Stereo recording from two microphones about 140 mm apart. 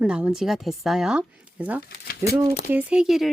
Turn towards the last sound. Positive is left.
turn(degrees=0)  # may be behind; listen again after turning